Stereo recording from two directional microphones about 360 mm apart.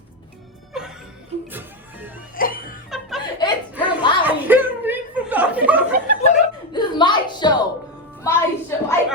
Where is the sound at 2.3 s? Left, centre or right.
Left.